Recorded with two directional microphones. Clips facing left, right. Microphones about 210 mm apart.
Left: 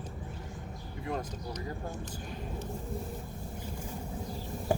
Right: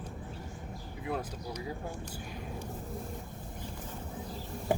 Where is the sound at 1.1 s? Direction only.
5° right (ahead or behind).